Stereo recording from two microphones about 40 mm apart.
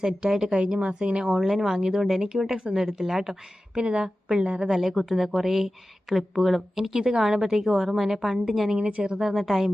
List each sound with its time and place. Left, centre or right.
0.0 s speech: centre
1.3 s a woman's voice: centre
3.8 s a woman's voice: centre
8.8 s speech: right
9.1 s a woman's voice: centre